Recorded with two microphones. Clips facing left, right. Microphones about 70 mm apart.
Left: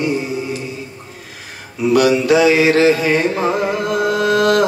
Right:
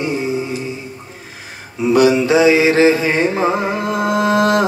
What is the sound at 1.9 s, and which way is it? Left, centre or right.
Music, right.